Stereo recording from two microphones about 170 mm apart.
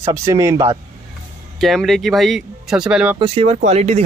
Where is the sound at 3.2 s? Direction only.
35° right (ahead or behind).